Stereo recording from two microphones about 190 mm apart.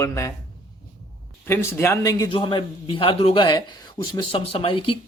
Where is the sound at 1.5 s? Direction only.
15° left (ahead or behind).